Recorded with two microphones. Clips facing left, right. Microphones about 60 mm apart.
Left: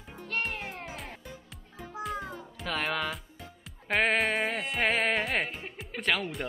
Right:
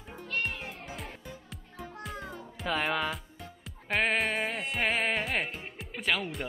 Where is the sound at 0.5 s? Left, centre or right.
Left.